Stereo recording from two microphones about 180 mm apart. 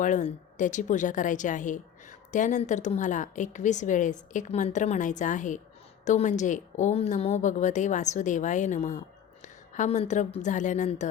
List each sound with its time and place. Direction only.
0.0 s a woman's voice: 45° left (ahead or behind)